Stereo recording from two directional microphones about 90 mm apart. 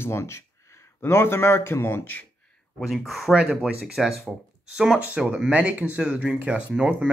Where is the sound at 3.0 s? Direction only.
Centre (ahead or behind).